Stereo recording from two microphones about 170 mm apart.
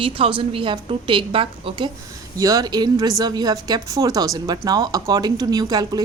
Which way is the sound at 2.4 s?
20° right (ahead or behind).